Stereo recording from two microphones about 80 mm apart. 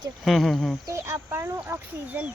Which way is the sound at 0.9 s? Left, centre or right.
Right.